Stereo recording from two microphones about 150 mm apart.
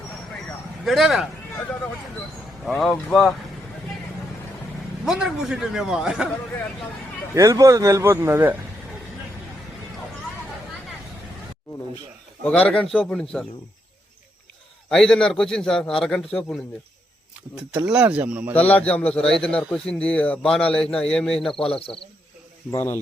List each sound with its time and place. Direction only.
0.9 s a man's voice: centre (ahead or behind)
2.6 s a man's voice: centre (ahead or behind)
5.0 s a man's voice: 5° right (ahead or behind)
7.3 s a man's voice: 20° right (ahead or behind)
12.5 s a man's voice: 5° left (ahead or behind)
14.8 s a man's voice: 5° left (ahead or behind)
17.8 s speech: 10° right (ahead or behind)
18.5 s a man's voice: 10° left (ahead or behind)
22.7 s a man's voice: 15° left (ahead or behind)